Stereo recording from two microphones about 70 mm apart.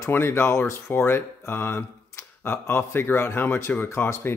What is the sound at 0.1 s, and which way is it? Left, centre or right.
Speech, left.